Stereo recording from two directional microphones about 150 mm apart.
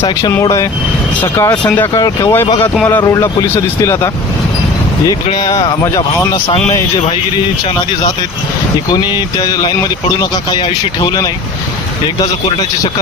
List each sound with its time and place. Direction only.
0.2 s speech: 20° left (ahead or behind)
2.0 s speech: 25° left (ahead or behind)
6.0 s speech: 35° left (ahead or behind)
8.9 s speech: 25° left (ahead or behind)
12.2 s speech: 25° left (ahead or behind)